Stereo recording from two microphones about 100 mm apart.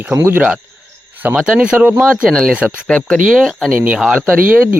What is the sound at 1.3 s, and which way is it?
Speech, 10° right (ahead or behind).